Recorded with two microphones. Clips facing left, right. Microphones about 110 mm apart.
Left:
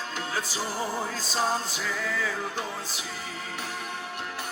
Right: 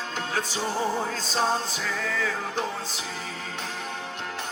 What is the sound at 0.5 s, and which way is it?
Music, 25° right (ahead or behind).